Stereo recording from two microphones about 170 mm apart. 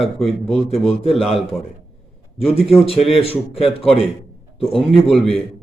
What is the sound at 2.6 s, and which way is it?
A man's voice, centre (ahead or behind).